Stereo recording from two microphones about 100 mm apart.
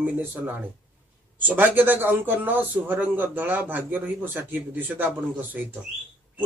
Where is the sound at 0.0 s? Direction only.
20° right (ahead or behind).